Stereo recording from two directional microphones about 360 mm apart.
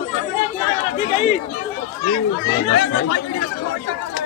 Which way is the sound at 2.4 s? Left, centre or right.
Left.